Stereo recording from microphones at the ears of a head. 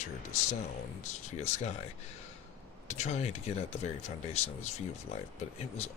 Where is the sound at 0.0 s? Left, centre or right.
Left.